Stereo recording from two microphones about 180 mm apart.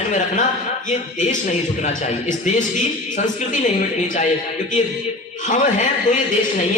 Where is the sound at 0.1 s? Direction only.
45° left (ahead or behind).